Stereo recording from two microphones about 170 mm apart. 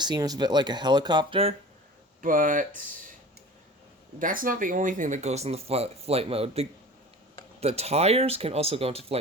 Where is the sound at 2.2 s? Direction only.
50° right (ahead or behind).